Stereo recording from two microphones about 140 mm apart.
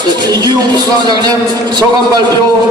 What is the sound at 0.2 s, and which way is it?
A man's voice, 30° right (ahead or behind).